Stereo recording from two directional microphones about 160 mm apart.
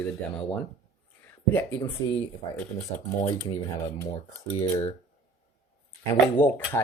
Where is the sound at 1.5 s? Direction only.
15° left (ahead or behind).